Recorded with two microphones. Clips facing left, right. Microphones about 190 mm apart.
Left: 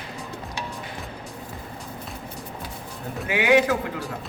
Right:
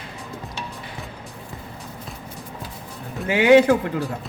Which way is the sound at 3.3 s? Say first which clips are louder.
Right 6 dB; 30° right (ahead or behind).